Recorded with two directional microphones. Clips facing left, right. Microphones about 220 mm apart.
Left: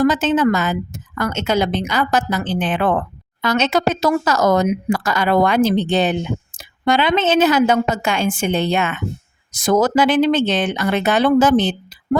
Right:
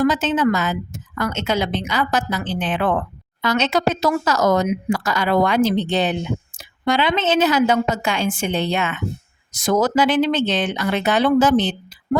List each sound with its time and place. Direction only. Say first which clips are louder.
0.0 s a woman's voice: left 2 dB; 50° left (ahead or behind)